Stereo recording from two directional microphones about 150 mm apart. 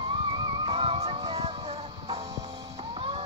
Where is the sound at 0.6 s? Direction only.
40° right (ahead or behind).